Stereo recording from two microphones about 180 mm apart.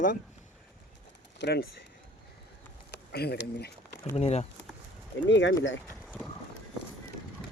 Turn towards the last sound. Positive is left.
turn(degrees=0)  # may be behind; listen again after turning